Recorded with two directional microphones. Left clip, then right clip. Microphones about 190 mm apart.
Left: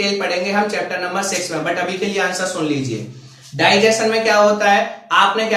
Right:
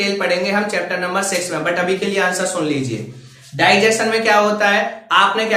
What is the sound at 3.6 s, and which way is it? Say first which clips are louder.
Speech: even; 15° right (ahead or behind).